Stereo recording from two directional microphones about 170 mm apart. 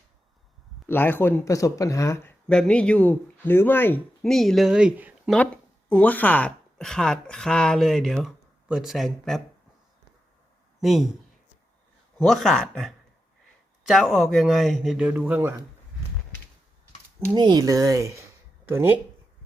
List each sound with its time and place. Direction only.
0.9 s speech: 10° left (ahead or behind)
2.5 s speech: 5° left (ahead or behind)
4.2 s speech: centre (ahead or behind)
5.9 s a woman's voice: 10° left (ahead or behind)
10.8 s speech: centre (ahead or behind)
12.2 s a woman's voice: centre (ahead or behind)
17.3 s speech: 25° right (ahead or behind)